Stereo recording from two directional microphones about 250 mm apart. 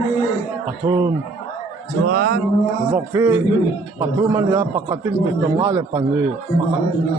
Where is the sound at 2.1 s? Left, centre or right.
Right.